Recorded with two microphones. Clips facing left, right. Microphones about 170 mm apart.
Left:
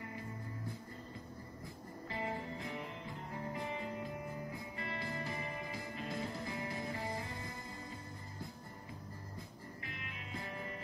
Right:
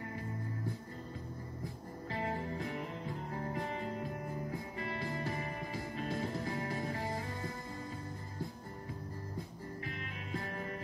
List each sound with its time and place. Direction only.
2.1 s music: 40° right (ahead or behind)
9.9 s music: 40° right (ahead or behind)